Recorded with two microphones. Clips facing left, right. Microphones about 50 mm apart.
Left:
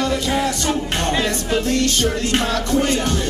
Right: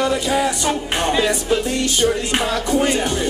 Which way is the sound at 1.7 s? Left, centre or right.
Centre.